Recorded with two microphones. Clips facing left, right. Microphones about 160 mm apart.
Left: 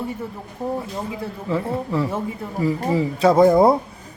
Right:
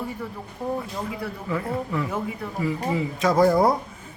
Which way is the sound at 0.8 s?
25° left (ahead or behind).